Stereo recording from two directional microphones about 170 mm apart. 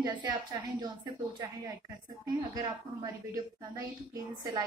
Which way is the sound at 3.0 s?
20° right (ahead or behind).